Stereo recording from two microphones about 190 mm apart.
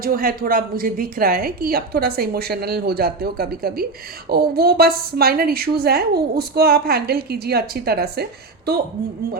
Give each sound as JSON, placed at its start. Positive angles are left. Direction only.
{"t": 0.0, "sound": "a woman's voice", "side_deg": -50}